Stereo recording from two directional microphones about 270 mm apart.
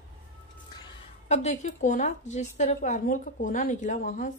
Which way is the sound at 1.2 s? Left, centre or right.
Left.